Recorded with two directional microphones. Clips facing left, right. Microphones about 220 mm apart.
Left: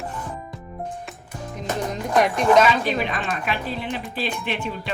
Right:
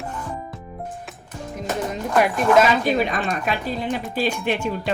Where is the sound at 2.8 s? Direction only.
45° right (ahead or behind).